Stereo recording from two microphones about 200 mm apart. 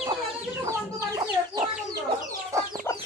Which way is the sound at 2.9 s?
10° left (ahead or behind).